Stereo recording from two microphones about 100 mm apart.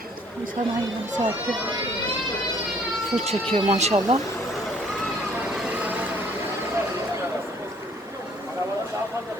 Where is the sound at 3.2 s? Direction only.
75° right (ahead or behind).